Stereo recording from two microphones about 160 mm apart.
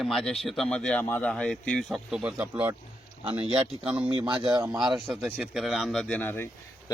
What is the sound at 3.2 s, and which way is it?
Speech, 35° right (ahead or behind).